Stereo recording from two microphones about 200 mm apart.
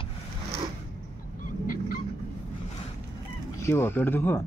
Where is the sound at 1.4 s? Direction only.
45° left (ahead or behind).